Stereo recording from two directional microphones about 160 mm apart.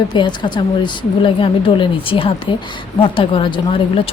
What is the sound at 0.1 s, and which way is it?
Speech, 30° left (ahead or behind).